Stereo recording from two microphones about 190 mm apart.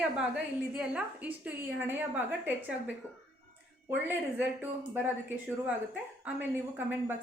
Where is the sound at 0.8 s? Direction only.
5° right (ahead or behind).